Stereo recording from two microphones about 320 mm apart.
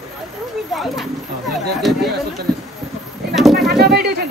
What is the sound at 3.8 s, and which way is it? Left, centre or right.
Bird, right.